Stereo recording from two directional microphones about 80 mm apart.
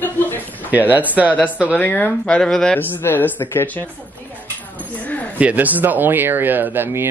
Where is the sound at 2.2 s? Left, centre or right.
Centre.